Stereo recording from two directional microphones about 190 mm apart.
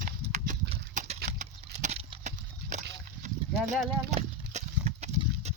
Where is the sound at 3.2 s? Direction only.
35° right (ahead or behind).